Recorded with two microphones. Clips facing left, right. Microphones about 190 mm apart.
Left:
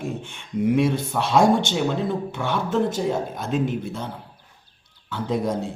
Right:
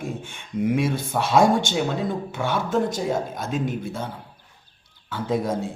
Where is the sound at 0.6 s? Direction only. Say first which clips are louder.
Left 2 dB; centre (ahead or behind).